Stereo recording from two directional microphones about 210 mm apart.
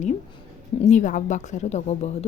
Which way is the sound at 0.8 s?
35° left (ahead or behind).